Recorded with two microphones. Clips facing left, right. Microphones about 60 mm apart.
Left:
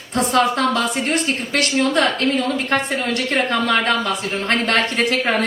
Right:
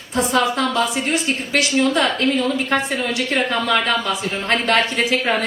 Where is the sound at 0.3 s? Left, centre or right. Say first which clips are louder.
Left 1 dB; left.